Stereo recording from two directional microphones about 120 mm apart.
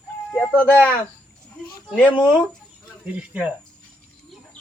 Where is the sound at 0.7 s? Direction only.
10° left (ahead or behind).